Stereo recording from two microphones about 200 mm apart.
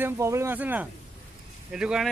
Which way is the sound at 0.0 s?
15° right (ahead or behind).